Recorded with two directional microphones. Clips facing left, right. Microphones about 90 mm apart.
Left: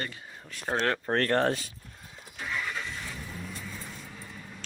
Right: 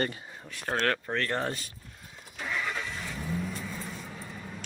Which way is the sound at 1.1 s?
50° left (ahead or behind).